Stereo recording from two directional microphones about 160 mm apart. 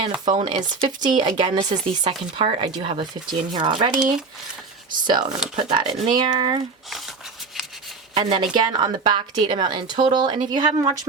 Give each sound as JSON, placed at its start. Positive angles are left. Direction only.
{"t": 0.0, "sound": "speech", "side_deg": -30}
{"t": 3.9, "sound": "speech", "side_deg": -5}
{"t": 5.0, "sound": "speech", "side_deg": -25}
{"t": 8.1, "sound": "speech", "side_deg": -30}